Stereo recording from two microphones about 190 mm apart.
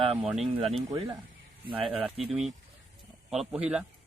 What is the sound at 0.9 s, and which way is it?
Speech, 20° right (ahead or behind).